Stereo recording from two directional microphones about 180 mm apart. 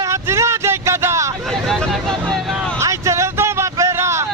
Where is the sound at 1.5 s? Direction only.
Centre (ahead or behind).